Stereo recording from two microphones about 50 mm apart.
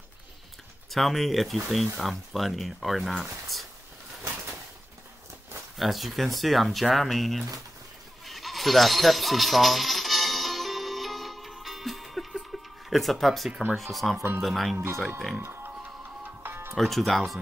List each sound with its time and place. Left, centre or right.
0.8 s speech: centre
5.8 s speech: centre
8.3 s music: centre
13.5 s speech: right
13.7 s speech: centre
15.4 s music: right
16.7 s speech: centre